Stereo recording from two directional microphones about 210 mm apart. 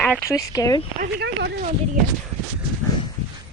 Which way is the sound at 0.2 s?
15° left (ahead or behind).